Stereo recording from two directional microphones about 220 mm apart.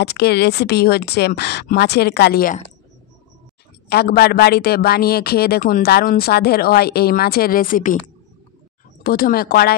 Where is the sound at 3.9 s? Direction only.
45° left (ahead or behind).